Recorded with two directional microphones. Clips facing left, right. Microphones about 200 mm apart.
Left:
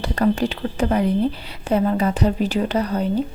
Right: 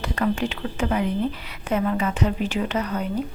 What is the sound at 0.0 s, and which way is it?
Speech, 35° left (ahead or behind).